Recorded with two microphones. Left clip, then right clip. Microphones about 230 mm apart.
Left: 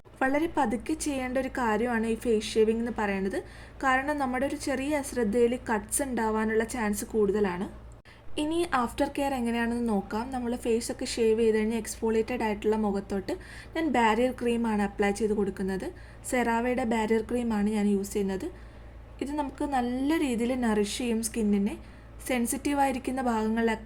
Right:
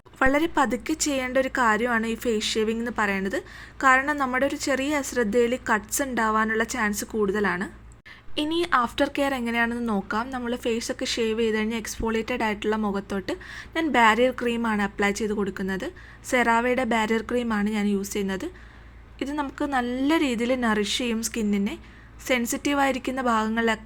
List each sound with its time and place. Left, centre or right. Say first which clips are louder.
0.2 s a woman's voice: right 5 dB; centre